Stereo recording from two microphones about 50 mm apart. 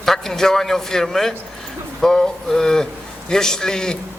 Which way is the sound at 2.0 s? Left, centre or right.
Centre.